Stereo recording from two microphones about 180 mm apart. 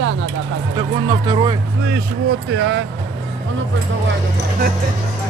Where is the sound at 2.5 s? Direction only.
80° right.